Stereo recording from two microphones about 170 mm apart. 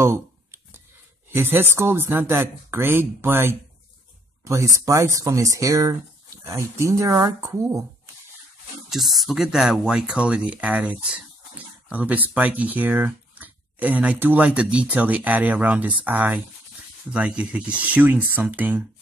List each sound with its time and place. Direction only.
0.0 s a sound: 15° right (ahead or behind)
1.3 s speech: 15° right (ahead or behind)
8.9 s speech: centre (ahead or behind)